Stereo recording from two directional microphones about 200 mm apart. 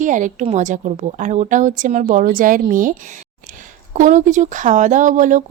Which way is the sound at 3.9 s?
40° right (ahead or behind).